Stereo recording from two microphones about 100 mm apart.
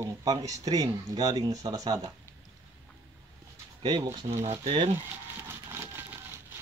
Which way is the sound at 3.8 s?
50° right (ahead or behind).